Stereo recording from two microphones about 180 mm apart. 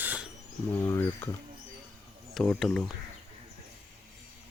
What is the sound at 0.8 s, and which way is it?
Speech, 15° left (ahead or behind).